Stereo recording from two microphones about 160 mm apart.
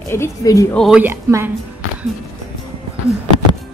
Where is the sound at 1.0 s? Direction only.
15° right (ahead or behind).